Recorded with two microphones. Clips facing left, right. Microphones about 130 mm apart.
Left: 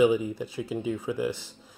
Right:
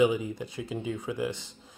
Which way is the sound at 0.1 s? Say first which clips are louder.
Left 4 dB; 10° left (ahead or behind).